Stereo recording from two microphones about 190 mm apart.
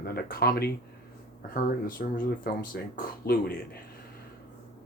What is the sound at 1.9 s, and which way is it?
Speech, 45° left (ahead or behind).